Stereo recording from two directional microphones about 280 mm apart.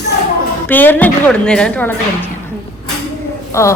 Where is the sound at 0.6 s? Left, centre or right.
Centre.